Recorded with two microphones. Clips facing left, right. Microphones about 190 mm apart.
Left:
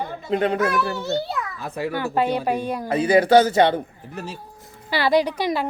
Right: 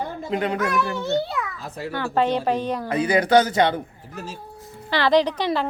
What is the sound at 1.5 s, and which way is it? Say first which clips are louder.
Speech: left 5 dB; 60° left (ahead or behind).